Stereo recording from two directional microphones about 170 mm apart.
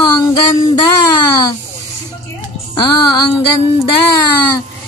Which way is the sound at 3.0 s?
25° left (ahead or behind).